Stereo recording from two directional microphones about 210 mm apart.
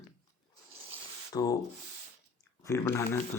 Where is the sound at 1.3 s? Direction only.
15° left (ahead or behind).